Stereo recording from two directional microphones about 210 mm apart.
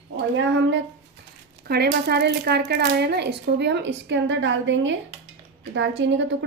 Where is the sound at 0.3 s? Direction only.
60° right (ahead or behind).